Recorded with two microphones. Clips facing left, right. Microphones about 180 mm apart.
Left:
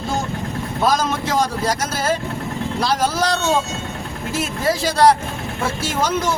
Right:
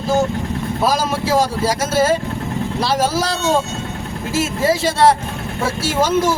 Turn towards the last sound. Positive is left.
turn(degrees=0)  # may be behind; listen again after turning